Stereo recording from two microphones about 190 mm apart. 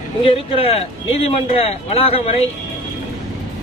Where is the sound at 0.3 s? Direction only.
30° left (ahead or behind).